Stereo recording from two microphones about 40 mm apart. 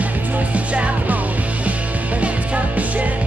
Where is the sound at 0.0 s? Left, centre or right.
Right.